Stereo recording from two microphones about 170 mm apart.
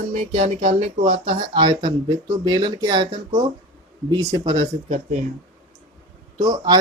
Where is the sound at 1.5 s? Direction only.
25° right (ahead or behind).